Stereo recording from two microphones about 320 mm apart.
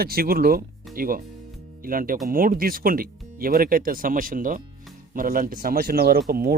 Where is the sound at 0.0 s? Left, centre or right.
Right.